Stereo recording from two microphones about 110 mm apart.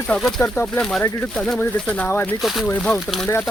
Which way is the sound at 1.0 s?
25° left (ahead or behind).